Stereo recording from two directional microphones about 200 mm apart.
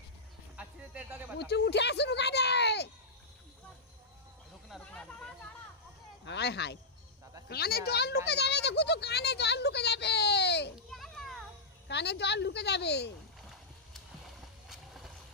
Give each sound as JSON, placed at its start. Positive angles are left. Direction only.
{"t": 0.6, "sound": "a sound", "side_deg": -5}
{"t": 1.4, "sound": "speech", "side_deg": 55}
{"t": 4.6, "sound": "a sound", "side_deg": 5}
{"t": 6.2, "sound": "a woman's voice", "side_deg": 60}
{"t": 10.9, "sound": "children playing", "side_deg": 0}
{"t": 11.9, "sound": "a woman's voice", "side_deg": 55}
{"t": 14.2, "sound": "boat", "side_deg": 0}